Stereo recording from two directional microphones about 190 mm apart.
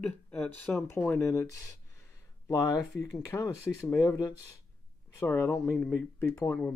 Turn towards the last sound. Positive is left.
turn(degrees=15)  # may be behind; listen again after turning